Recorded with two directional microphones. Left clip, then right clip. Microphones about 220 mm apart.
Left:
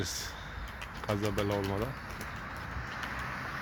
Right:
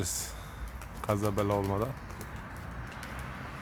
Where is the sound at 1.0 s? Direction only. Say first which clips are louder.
Right 3 dB; 20° right (ahead or behind).